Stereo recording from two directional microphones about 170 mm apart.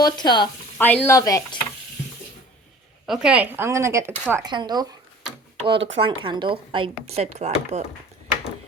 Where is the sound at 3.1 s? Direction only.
5° right (ahead or behind); by 4.9 s 25° right (ahead or behind).